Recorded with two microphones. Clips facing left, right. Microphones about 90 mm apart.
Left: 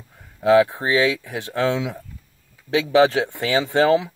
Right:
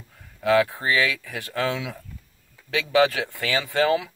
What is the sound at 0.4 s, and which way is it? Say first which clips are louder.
Speech: left 5 dB; 20° left (ahead or behind).